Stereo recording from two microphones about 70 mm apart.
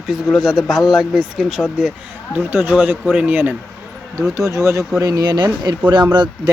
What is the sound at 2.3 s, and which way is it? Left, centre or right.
A man's voice, right.